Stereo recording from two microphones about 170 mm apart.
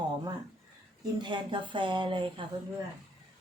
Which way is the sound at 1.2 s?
30° right (ahead or behind).